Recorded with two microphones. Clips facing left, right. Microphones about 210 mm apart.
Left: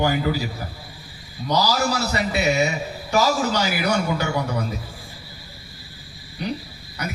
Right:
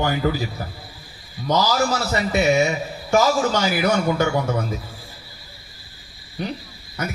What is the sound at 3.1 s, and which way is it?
A man's voice, 45° right (ahead or behind).